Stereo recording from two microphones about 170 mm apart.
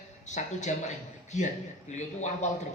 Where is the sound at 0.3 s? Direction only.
45° left (ahead or behind).